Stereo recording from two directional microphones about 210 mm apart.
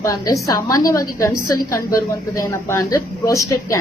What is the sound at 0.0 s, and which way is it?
A woman's voice, 15° left (ahead or behind).